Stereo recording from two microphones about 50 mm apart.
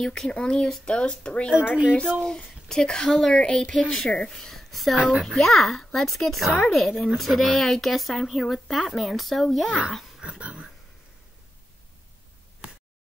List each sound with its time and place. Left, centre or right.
0.0 s speech: centre
1.6 s speech: centre
2.2 s speech: centre
3.3 s speech: centre
10.2 s dog: centre